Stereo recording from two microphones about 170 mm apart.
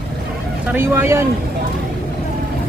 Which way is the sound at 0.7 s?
15° right (ahead or behind).